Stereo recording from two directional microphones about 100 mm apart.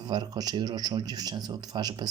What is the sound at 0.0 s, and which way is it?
A man's voice, 45° right (ahead or behind).